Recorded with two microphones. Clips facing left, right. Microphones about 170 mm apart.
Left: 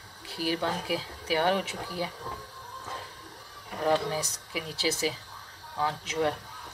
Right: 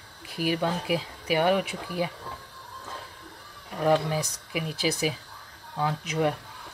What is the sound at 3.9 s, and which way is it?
Speech, 15° right (ahead or behind).